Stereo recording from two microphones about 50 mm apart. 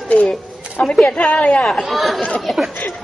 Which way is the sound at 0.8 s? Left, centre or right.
Centre.